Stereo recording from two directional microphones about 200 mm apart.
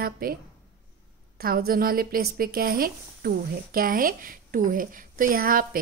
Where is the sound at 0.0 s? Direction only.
50° right (ahead or behind).